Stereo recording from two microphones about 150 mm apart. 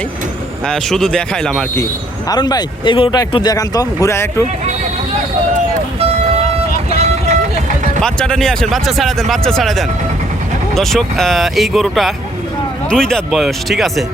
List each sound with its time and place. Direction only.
0.6 s speech: 5° left (ahead or behind)
1.7 s speech: 20° left (ahead or behind)
6.9 s vehicle: 45° right (ahead or behind)
8.0 s speech: 5° left (ahead or behind)